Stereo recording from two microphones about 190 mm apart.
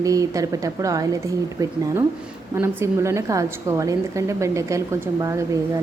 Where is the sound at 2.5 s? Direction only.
15° right (ahead or behind).